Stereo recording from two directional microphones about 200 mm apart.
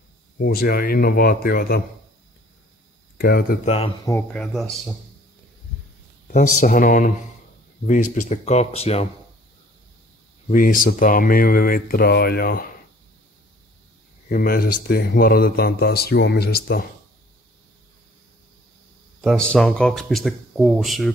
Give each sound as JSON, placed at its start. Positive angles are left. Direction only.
{"t": 0.4, "sound": "speech", "side_deg": 50}
{"t": 3.2, "sound": "speech", "side_deg": 50}
{"t": 3.6, "sound": "speech", "side_deg": 30}
{"t": 4.0, "sound": "speech", "side_deg": 10}
{"t": 6.2, "sound": "speech", "side_deg": 45}
{"t": 10.5, "sound": "speech", "side_deg": 45}
{"t": 14.3, "sound": "speech", "side_deg": 45}
{"t": 19.2, "sound": "speech", "side_deg": 5}